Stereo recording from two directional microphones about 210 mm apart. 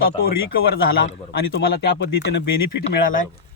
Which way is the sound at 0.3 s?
45° left (ahead or behind).